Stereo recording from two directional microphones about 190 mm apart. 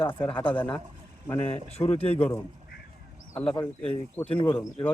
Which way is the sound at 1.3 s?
35° left (ahead or behind).